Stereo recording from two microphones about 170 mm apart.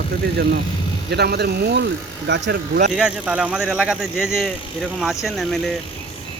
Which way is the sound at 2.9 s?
5° right (ahead or behind).